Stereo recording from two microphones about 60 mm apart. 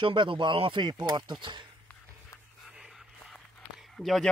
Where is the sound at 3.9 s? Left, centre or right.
Centre.